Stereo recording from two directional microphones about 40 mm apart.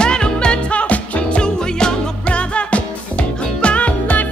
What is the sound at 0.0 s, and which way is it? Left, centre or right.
Music, left.